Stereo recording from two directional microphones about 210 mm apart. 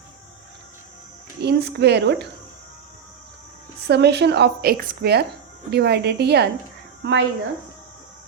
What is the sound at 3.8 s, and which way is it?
A woman's voice, 55° right (ahead or behind).